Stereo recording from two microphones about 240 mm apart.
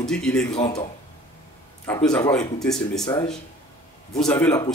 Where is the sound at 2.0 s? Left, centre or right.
Centre.